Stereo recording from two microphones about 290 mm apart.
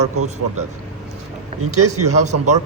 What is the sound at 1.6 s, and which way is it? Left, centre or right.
Speech, right.